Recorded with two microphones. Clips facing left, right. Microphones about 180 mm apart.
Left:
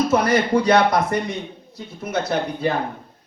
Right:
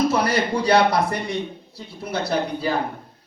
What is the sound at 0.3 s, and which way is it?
Speech, 30° right (ahead or behind).